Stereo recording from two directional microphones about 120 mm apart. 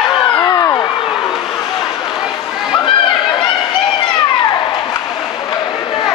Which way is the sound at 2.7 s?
40° left (ahead or behind).